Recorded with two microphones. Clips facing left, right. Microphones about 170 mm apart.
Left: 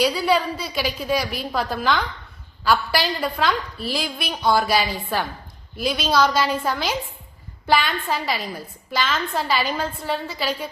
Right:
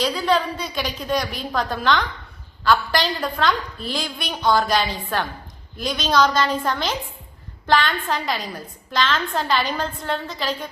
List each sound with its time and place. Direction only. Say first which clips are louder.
0.0 s a woman's voice: left 1 dB; 10° left (ahead or behind)